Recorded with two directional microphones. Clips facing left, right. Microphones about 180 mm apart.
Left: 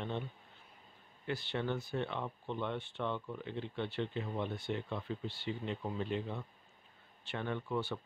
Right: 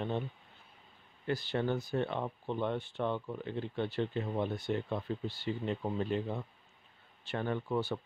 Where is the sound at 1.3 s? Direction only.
40° right (ahead or behind).